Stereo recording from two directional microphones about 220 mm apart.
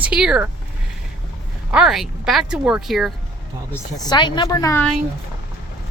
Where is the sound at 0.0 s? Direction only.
5° right (ahead or behind).